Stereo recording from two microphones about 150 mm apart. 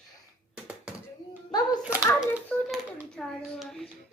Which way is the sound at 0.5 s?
10° right (ahead or behind).